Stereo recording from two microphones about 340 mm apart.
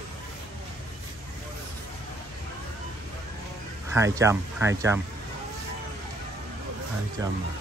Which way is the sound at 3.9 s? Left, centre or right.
Centre.